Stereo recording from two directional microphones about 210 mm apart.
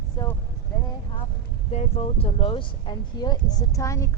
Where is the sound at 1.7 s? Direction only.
30° left (ahead or behind); by 4.0 s 15° left (ahead or behind).